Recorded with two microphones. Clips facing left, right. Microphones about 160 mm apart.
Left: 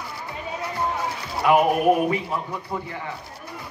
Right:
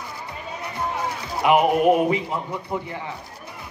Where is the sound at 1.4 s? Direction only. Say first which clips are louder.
Right 1 dB; 20° right (ahead or behind).